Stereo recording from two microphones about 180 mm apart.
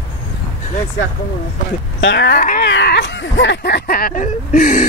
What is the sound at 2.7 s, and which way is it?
Speech, 65° left (ahead or behind).